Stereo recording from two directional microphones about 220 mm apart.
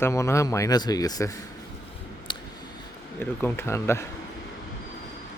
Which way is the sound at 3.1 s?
10° left (ahead or behind).